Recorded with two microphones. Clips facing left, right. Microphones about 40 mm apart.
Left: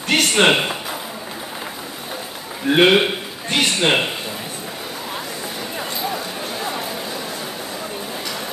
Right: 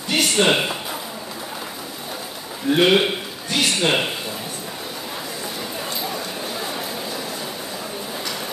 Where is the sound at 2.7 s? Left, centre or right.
Left.